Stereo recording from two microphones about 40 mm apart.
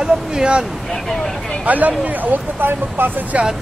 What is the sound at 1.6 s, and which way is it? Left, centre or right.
Speech, right.